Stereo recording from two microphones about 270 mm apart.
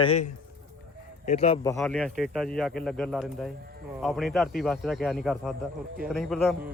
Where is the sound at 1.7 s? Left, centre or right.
Centre.